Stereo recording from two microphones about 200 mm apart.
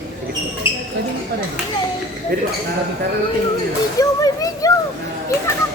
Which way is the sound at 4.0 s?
15° left (ahead or behind).